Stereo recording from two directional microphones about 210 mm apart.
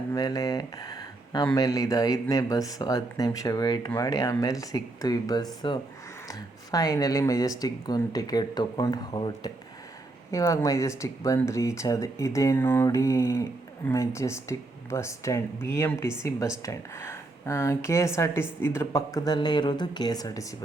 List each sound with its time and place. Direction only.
0.1 s speech: 15° left (ahead or behind)